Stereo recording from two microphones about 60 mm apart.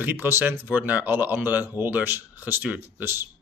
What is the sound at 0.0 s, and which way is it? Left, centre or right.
Speech, right.